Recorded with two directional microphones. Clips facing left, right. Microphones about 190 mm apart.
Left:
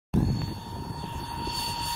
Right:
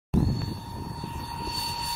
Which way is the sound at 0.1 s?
Centre (ahead or behind).